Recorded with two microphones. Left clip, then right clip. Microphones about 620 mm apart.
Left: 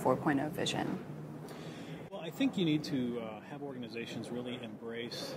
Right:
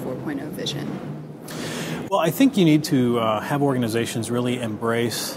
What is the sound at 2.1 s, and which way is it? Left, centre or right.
Speech, right.